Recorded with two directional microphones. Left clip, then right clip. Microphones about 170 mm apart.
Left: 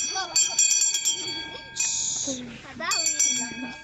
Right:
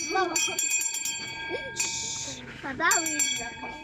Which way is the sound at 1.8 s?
75° right (ahead or behind).